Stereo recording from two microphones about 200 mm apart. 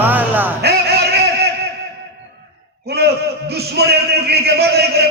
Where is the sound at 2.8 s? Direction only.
55° right (ahead or behind).